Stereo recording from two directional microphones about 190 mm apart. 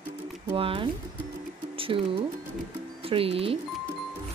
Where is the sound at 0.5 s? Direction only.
30° right (ahead or behind).